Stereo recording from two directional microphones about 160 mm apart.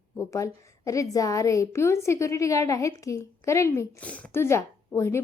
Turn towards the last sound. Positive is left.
turn(degrees=15)  # may be behind; listen again after turning